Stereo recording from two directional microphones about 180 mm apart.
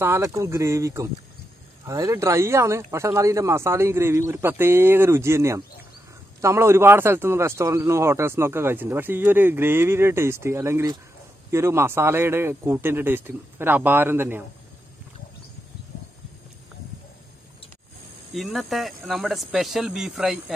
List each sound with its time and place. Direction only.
0.0 s speech: 15° right (ahead or behind)
18.3 s speech: centre (ahead or behind)